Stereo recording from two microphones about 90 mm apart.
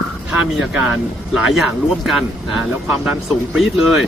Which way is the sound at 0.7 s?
15° right (ahead or behind).